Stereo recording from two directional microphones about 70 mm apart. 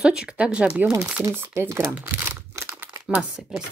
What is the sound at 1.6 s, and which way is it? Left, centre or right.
Speech, right.